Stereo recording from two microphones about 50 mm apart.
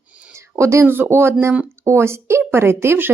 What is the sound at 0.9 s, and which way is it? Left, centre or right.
Speech, right.